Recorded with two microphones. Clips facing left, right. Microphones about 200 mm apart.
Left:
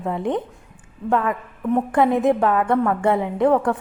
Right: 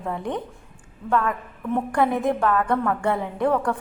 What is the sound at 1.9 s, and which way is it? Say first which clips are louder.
A woman's voice: left 4 dB; 20° left (ahead or behind).